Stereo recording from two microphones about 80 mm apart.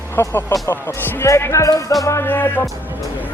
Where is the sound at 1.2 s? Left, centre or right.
Left.